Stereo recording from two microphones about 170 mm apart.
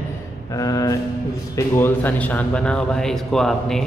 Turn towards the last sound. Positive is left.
turn(degrees=5)  # may be behind; listen again after turning